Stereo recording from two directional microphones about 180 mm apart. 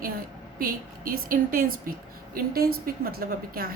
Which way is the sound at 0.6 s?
55° right (ahead or behind).